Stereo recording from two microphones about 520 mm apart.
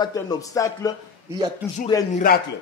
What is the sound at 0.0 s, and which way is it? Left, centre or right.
A man's voice, centre.